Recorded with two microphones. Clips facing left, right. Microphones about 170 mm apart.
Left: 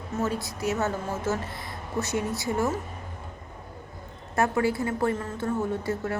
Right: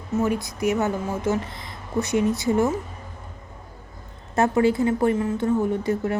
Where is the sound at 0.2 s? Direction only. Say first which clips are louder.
Right 5 dB; 15° right (ahead or behind).